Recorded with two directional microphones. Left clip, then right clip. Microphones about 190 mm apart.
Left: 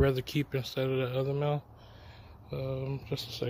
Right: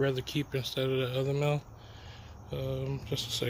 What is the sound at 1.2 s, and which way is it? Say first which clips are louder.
Speech: right 1 dB; 5° left (ahead or behind).